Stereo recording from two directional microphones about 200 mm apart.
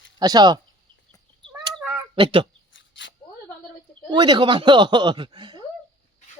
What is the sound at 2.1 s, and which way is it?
Speech, 25° right (ahead or behind).